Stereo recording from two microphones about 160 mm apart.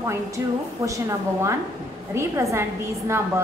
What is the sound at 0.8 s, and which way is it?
A woman's voice, 20° right (ahead or behind).